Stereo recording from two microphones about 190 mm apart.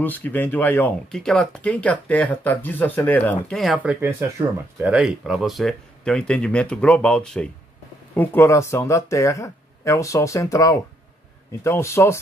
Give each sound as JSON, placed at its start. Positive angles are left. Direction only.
{"t": 0.0, "sound": "speech", "side_deg": 10}